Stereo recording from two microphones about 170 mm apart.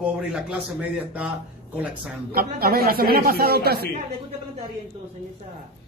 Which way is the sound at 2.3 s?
65° right (ahead or behind).